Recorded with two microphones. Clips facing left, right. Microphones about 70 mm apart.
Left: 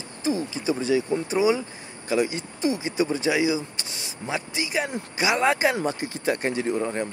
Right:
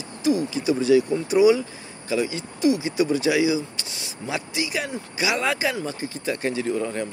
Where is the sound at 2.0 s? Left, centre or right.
Left.